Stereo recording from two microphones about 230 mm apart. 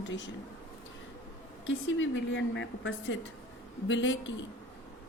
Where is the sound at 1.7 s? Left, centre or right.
Left.